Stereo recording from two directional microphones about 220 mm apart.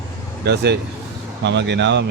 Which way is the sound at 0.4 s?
50° right (ahead or behind).